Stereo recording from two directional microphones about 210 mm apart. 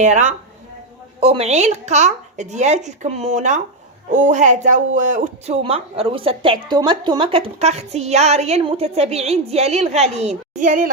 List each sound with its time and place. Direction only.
0.0 s speech: 35° right (ahead or behind)